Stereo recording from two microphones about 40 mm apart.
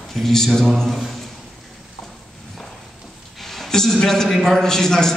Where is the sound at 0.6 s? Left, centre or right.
Centre.